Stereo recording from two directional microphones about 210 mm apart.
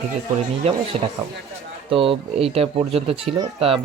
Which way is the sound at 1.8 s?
25° right (ahead or behind).